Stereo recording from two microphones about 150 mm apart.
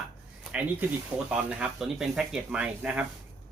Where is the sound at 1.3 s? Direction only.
5° right (ahead or behind).